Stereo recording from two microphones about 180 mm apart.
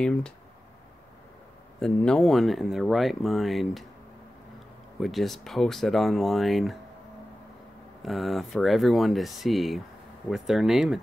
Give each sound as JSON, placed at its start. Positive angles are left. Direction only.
{"t": 0.0, "sound": "speech", "side_deg": 5}
{"t": 1.8, "sound": "speech", "side_deg": 5}
{"t": 5.0, "sound": "speech", "side_deg": 0}
{"t": 8.0, "sound": "speech", "side_deg": 0}